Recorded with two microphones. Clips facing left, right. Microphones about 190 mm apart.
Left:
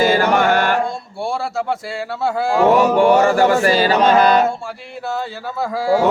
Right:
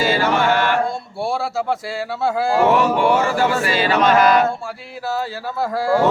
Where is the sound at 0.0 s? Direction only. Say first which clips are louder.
Left 3 dB; 50° left (ahead or behind).